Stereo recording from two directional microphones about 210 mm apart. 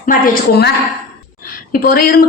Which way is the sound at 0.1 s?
50° left (ahead or behind).